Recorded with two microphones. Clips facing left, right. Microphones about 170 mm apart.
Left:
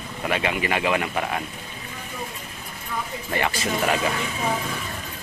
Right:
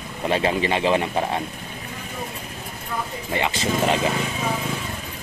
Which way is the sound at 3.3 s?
20° right (ahead or behind).